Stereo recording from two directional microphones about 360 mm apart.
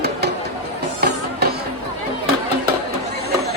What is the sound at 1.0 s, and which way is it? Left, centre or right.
Music, right.